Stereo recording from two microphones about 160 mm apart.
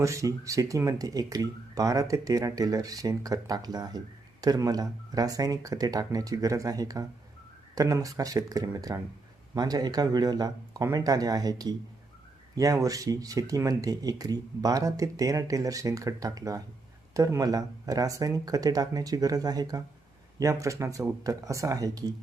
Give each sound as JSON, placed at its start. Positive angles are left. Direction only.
{"t": 0.0, "sound": "speech", "side_deg": -20}